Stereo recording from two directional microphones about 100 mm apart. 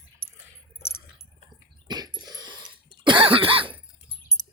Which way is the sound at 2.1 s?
45° right (ahead or behind).